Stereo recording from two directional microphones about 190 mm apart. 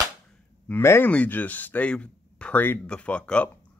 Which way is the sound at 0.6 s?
10° left (ahead or behind).